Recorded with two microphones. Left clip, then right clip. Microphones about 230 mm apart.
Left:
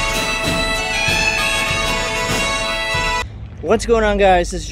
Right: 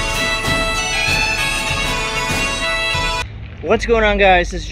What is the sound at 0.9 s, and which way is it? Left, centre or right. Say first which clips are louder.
Bagpipes: left 1 dB; centre.